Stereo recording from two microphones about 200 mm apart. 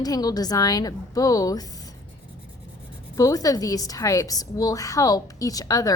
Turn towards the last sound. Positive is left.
turn(degrees=15)  # may be behind; listen again after turning